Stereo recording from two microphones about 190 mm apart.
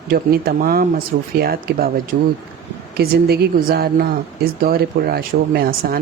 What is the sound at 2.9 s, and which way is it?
Speech, 55° right (ahead or behind).